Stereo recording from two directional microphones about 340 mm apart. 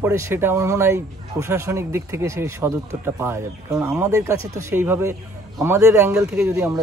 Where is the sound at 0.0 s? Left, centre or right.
Centre.